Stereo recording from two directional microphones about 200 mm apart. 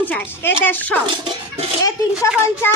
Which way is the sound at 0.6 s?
10° left (ahead or behind).